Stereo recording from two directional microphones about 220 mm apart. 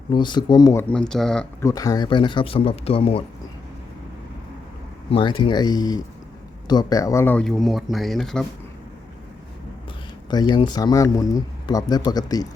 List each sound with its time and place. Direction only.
0.1 s speech: 20° left (ahead or behind); by 1.5 s 5° left (ahead or behind)
1.6 s speech: 15° left (ahead or behind)
5.1 s speech: 20° left (ahead or behind); by 8.4 s centre (ahead or behind)
10.2 s speech: 20° left (ahead or behind)